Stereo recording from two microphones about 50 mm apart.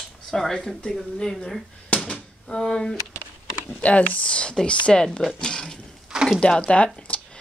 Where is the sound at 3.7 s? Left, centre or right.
Left; by 5.8 s centre.